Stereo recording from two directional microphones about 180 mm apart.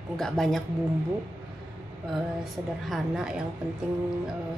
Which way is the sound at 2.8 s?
Centre (ahead or behind).